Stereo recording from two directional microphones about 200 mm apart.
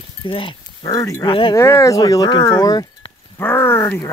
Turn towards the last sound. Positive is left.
turn(degrees=10)  # may be behind; listen again after turning